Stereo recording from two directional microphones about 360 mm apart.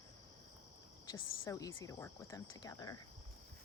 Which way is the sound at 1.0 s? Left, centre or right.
Centre.